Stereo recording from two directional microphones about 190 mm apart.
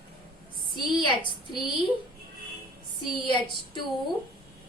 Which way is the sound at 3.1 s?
25° left (ahead or behind).